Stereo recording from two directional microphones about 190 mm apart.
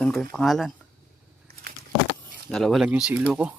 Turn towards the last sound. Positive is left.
turn(degrees=-5)  # may be behind; listen again after turning